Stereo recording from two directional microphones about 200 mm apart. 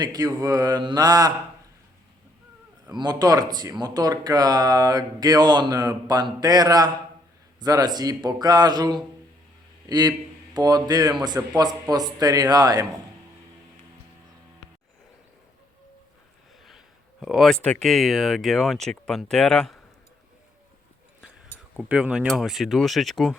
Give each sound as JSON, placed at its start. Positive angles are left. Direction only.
{"t": 0.0, "sound": "speech", "side_deg": -20}
{"t": 2.9, "sound": "a man's voice", "side_deg": -20}
{"t": 16.6, "sound": "speech", "side_deg": 0}
{"t": 21.8, "sound": "speech", "side_deg": -5}